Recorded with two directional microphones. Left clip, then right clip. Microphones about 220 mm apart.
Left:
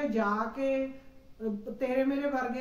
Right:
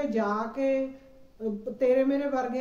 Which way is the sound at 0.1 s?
10° left (ahead or behind).